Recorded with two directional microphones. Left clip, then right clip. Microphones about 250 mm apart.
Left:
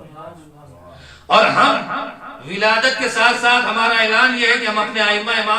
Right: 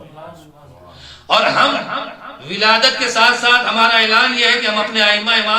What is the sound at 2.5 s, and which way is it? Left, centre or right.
A man's voice, right.